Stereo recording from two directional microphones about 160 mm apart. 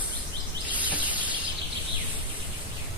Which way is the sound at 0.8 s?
10° right (ahead or behind).